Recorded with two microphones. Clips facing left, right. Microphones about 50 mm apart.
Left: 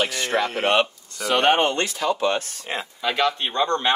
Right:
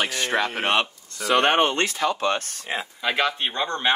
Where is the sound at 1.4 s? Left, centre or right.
Right.